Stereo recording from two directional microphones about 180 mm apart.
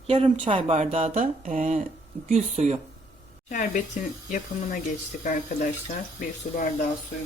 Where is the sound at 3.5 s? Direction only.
45° left (ahead or behind).